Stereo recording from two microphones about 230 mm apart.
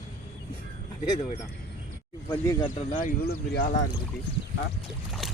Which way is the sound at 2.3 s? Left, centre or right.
Centre.